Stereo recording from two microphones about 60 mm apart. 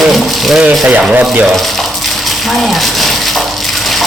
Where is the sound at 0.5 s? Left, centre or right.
Centre.